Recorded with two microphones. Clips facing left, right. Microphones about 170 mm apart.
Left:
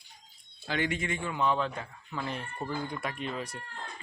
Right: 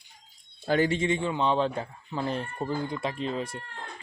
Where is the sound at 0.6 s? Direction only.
40° right (ahead or behind).